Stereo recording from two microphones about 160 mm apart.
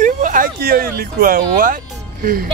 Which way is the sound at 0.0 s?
55° right (ahead or behind).